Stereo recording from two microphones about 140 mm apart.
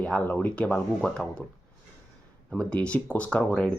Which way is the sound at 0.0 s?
10° left (ahead or behind).